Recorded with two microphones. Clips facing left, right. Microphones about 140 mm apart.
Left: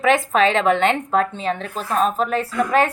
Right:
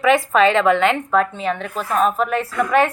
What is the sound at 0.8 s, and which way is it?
Speech, 30° left (ahead or behind).